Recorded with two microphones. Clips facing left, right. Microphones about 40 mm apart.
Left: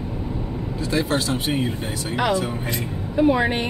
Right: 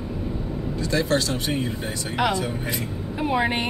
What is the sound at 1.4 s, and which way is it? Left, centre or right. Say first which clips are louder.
Speech: left 2 dB; left.